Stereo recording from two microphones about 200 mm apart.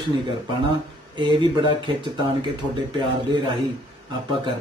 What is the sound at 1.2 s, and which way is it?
Speech, 25° right (ahead or behind).